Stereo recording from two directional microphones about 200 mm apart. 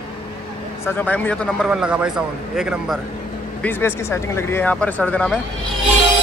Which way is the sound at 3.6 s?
10° left (ahead or behind).